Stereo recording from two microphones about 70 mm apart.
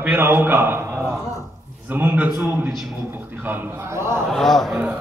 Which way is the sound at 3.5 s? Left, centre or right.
Right.